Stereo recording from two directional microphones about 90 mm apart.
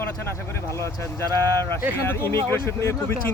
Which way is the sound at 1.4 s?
25° left (ahead or behind).